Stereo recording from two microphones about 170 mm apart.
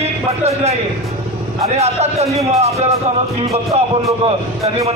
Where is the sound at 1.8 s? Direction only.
40° right (ahead or behind).